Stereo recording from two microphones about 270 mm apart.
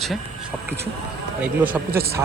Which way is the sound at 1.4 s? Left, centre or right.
Centre.